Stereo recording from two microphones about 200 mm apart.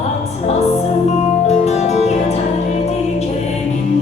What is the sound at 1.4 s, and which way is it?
Music, 35° left (ahead or behind).